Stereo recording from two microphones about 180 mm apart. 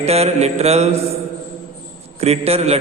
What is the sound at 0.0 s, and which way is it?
Speech, 35° right (ahead or behind).